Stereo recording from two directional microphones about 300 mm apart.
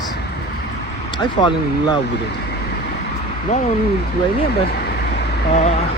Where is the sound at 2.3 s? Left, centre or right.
Left.